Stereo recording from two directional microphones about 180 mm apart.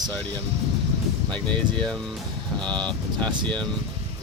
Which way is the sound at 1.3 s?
5° left (ahead or behind).